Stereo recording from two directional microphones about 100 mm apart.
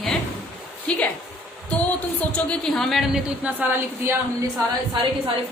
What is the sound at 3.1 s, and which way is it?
A woman's voice, 10° right (ahead or behind).